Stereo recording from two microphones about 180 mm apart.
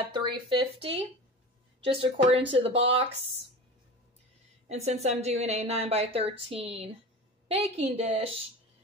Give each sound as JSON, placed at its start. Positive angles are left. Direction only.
{"t": 0.1, "sound": "a woman's voice", "side_deg": -30}
{"t": 4.6, "sound": "a woman's voice", "side_deg": -35}